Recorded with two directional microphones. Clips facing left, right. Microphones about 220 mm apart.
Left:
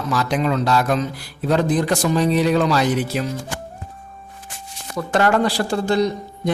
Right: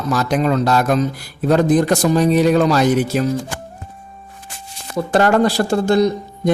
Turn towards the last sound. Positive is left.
turn(degrees=-45)  # may be behind; listen again after turning